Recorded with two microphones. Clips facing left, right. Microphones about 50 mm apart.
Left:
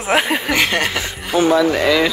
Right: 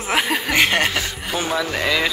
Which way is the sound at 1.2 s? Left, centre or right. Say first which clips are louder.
Left 12 dB; centre.